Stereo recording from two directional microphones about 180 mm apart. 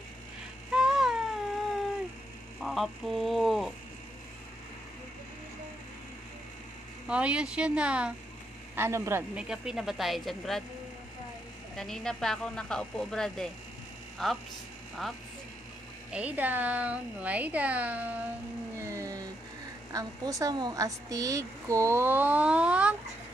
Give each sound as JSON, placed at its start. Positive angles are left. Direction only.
{"t": 0.7, "sound": "a sound", "side_deg": -5}
{"t": 2.6, "sound": "speech", "side_deg": 0}
{"t": 7.1, "sound": "a woman's voice", "side_deg": -5}
{"t": 11.7, "sound": "speech", "side_deg": 5}
{"t": 16.1, "sound": "a woman's voice", "side_deg": -5}
{"t": 18.8, "sound": "a sound", "side_deg": -15}
{"t": 19.9, "sound": "a woman's voice", "side_deg": -20}